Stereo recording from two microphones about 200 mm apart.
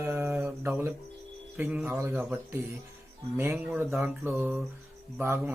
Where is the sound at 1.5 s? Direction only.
10° right (ahead or behind).